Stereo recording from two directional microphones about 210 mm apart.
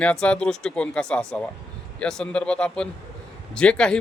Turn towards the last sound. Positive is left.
turn(degrees=5)  # may be behind; listen again after turning